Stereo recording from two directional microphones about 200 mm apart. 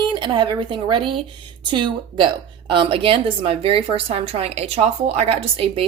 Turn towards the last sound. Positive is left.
turn(degrees=-30)  # may be behind; listen again after turning